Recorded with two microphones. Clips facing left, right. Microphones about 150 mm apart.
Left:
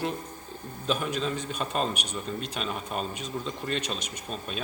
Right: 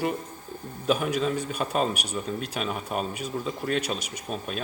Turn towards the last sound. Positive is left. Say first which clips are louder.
# right 3 dB
turn(degrees=-5)  # may be behind; listen again after turning